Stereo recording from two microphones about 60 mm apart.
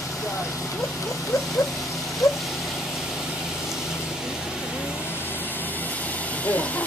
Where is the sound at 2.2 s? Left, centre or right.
Left.